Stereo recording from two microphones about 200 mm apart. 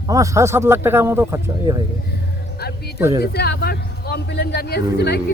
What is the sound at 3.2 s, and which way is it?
A man's voice, 55° left (ahead or behind).